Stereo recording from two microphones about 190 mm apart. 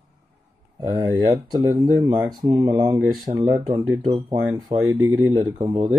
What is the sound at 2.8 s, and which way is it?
Speech, 15° right (ahead or behind).